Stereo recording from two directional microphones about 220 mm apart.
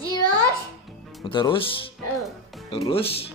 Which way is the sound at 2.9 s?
25° left (ahead or behind).